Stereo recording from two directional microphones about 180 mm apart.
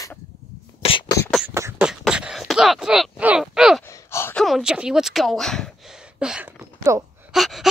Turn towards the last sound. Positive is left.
turn(degrees=0)  # may be behind; listen again after turning